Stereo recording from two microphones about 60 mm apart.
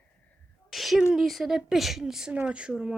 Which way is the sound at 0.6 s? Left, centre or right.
Centre.